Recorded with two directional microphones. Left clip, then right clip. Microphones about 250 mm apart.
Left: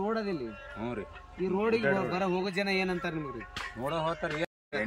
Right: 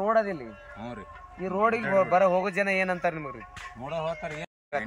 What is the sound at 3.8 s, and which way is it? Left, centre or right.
Speech, centre.